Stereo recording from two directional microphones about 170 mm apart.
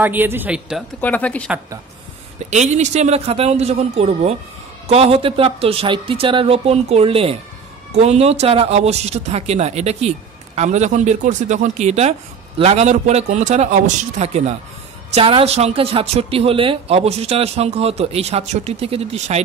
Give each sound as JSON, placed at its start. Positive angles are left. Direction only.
{"t": 0.0, "sound": "a man's voice", "side_deg": -10}
{"t": 1.0, "sound": "speech", "side_deg": 10}
{"t": 2.5, "sound": "speech", "side_deg": -45}